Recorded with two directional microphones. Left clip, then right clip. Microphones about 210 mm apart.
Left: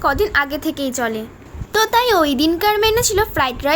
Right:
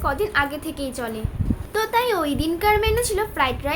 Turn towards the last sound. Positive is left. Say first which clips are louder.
# left 5 dB
turn(degrees=50)  # may be behind; listen again after turning